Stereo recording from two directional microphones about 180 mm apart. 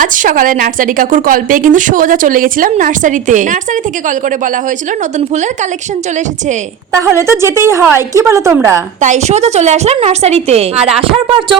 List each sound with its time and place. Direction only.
0.0 s a woman's voice: 45° right (ahead or behind)
6.9 s a woman's voice: 15° right (ahead or behind)
9.0 s a woman's voice: 40° right (ahead or behind)